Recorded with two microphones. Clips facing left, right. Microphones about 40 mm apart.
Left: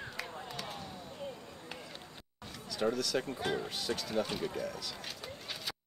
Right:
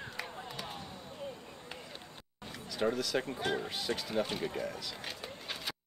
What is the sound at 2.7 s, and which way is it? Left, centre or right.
Speech, centre.